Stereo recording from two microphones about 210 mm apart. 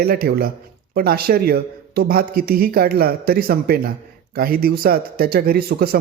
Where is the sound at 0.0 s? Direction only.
45° right (ahead or behind).